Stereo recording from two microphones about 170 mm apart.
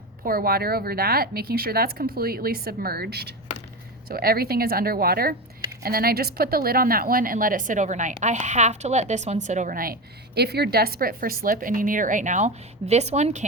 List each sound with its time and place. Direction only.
0.2 s a woman's voice: 60° right (ahead or behind)
4.1 s a woman's voice: 60° right (ahead or behind); by 13.4 s 40° right (ahead or behind)